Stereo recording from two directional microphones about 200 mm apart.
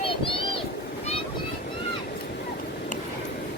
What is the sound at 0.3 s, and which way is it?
Speech, 25° left (ahead or behind).